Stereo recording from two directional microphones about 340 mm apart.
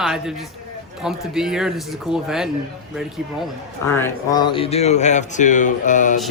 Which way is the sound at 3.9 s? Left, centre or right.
Centre.